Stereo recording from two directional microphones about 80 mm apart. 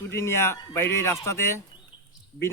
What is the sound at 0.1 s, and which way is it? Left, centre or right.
A man's voice, left.